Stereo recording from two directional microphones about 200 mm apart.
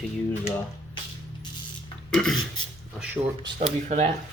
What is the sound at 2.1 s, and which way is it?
Speech, 5° left (ahead or behind).